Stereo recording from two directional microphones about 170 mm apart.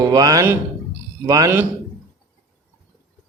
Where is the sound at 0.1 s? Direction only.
20° right (ahead or behind).